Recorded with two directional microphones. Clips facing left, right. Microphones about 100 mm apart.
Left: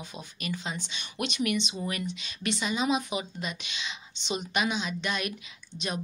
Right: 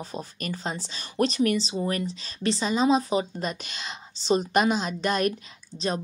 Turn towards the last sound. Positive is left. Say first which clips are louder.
# right 7 dB
turn(degrees=-50)  # may be behind; listen again after turning